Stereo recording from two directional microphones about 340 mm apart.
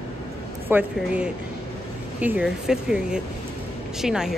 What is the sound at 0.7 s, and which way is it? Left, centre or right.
A woman's voice, centre.